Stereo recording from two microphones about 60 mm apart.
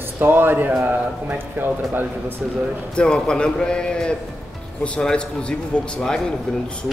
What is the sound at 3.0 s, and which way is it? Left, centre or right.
A man's voice, centre.